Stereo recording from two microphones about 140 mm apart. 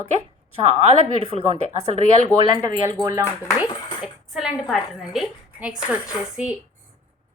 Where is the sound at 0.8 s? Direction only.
50° right (ahead or behind).